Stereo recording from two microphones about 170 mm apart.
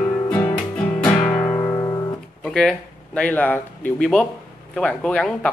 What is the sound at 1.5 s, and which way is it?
Music, 20° left (ahead or behind).